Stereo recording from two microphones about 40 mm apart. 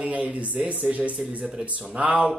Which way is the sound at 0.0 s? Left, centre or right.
Right.